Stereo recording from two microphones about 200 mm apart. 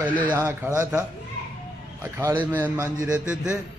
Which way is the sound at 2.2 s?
10° right (ahead or behind).